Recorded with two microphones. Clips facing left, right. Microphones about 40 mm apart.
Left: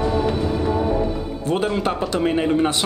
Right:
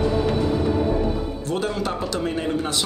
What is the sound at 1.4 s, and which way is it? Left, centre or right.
A man's voice, left.